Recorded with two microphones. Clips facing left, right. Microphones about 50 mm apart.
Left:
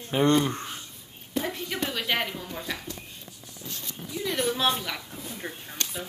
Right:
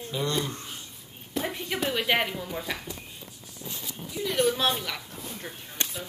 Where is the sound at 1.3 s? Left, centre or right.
Centre.